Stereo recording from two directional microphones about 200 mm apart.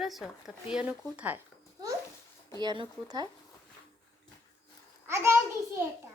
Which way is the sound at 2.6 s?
20° right (ahead or behind).